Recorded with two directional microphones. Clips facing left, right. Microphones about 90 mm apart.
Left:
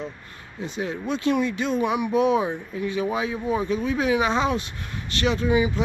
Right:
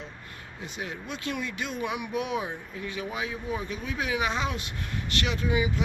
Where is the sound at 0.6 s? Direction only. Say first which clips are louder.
Left 9 dB; 30° left (ahead or behind).